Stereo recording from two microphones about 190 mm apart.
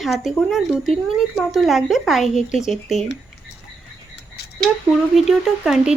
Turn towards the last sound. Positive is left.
turn(degrees=-5)  # may be behind; listen again after turning